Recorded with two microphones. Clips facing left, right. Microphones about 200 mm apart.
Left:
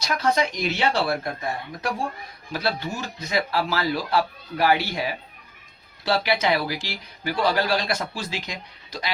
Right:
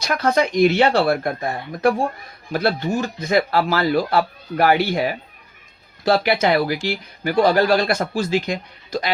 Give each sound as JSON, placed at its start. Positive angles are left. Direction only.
{"t": 0.0, "sound": "speech", "side_deg": -55}